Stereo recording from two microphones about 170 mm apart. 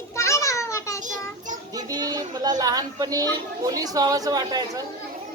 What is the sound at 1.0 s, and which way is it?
Speech, 50° right (ahead or behind).